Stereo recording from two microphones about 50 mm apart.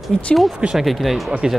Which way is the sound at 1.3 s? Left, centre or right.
Centre.